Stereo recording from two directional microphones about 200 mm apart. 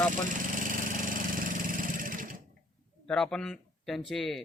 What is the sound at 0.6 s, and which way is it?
Engine, 40° right (ahead or behind).